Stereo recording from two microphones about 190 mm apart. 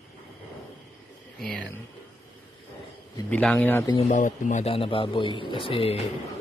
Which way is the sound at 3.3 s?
5° left (ahead or behind).